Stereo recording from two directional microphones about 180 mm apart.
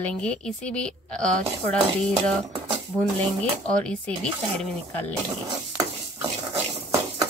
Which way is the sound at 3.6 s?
5° left (ahead or behind).